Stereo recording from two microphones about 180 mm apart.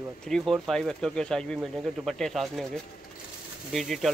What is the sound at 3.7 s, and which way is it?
Speech, centre (ahead or behind).